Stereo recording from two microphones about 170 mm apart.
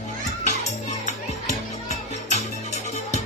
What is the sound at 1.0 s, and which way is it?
Music, 40° left (ahead or behind).